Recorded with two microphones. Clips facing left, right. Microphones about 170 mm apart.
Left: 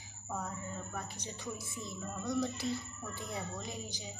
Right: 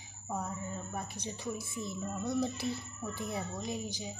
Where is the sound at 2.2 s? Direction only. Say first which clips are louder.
Right 1 dB; 5° right (ahead or behind).